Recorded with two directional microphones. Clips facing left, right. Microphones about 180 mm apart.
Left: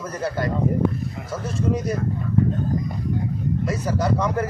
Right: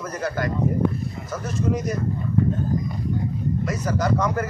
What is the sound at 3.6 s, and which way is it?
Speech, 30° left (ahead or behind).